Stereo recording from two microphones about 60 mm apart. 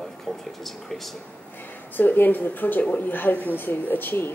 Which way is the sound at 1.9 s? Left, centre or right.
Left.